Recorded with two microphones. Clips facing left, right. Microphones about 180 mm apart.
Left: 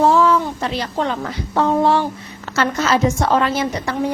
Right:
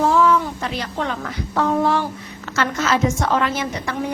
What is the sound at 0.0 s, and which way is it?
A woman's voice, 35° left (ahead or behind).